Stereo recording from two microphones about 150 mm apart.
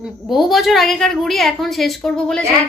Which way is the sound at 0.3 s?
Centre (ahead or behind).